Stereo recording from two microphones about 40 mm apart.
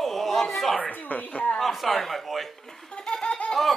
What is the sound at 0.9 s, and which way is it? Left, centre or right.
Speech, left.